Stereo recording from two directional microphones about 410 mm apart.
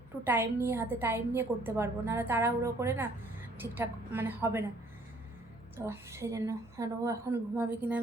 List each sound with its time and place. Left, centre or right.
0.3 s a woman's voice: centre
5.7 s a woman's voice: centre